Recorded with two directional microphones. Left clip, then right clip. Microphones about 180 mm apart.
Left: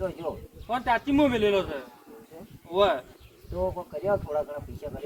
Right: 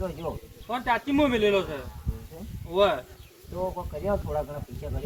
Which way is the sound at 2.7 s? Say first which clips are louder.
Even; 20° left (ahead or behind).